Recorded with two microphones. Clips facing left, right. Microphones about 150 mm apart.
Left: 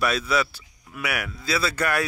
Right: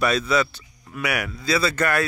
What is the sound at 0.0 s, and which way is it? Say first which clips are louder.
Speech: right 3 dB; 5° left (ahead or behind).